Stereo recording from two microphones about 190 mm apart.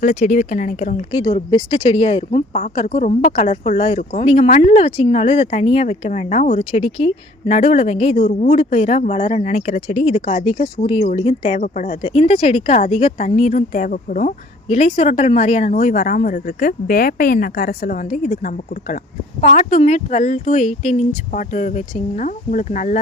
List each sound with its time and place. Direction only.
0.0 s speech: 45° left (ahead or behind)